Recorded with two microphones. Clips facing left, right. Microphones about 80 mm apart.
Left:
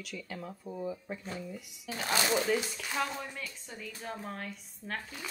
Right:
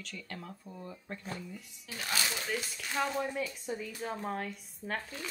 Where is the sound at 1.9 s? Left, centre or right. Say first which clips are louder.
Left 4 dB; left.